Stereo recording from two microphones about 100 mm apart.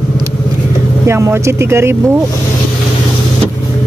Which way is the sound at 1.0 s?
25° right (ahead or behind).